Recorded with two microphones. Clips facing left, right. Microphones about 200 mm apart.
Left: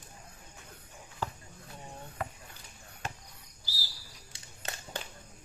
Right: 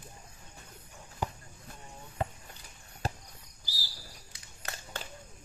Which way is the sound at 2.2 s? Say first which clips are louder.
Right 5 dB; 25° right (ahead or behind).